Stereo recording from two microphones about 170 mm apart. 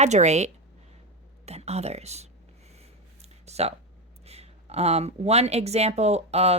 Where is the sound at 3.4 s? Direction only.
40° right (ahead or behind).